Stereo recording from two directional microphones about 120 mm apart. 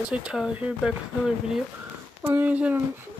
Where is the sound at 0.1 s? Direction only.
5° right (ahead or behind).